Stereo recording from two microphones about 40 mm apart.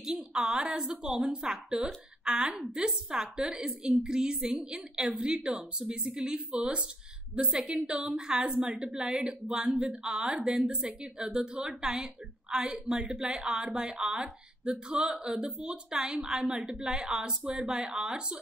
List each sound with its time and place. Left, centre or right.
0.0 s a woman's voice: centre